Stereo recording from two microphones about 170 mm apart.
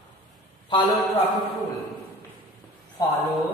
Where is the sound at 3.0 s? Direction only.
20° left (ahead or behind).